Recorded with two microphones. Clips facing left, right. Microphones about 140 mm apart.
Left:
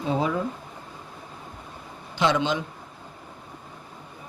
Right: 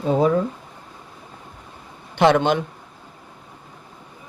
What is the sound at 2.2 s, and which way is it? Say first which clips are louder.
Speech: right 7 dB; 60° right (ahead or behind).